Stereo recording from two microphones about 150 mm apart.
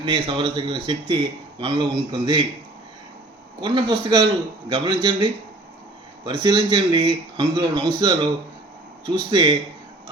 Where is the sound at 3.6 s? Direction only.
30° right (ahead or behind).